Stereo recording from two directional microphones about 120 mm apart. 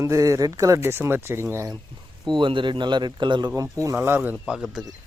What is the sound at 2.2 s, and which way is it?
Speech, 40° right (ahead or behind).